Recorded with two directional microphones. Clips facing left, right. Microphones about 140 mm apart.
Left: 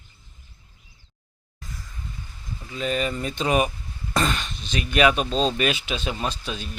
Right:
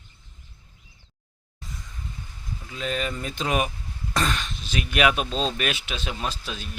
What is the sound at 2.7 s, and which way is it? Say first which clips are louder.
Speech: left 3 dB; centre (ahead or behind).